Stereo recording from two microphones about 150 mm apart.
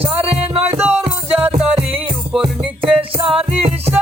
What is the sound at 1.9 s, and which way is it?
Music, 40° right (ahead or behind).